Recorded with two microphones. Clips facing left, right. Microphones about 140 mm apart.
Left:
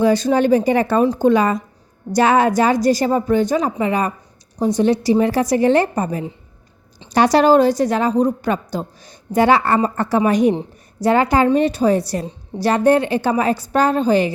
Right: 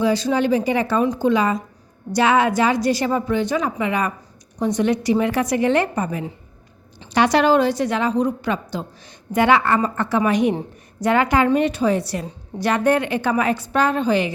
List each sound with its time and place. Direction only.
0.0 s a woman's voice: 50° left (ahead or behind)